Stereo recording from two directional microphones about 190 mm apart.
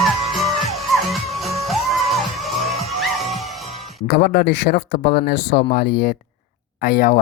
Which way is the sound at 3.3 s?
35° left (ahead or behind).